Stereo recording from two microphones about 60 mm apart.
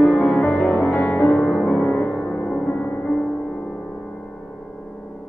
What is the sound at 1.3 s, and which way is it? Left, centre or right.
Music, centre.